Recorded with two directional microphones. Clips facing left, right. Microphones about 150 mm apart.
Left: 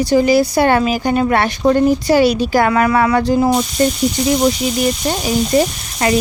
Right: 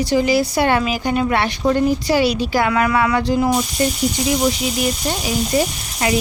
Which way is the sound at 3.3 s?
30° left (ahead or behind).